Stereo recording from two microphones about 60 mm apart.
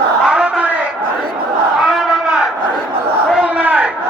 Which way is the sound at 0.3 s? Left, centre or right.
Centre.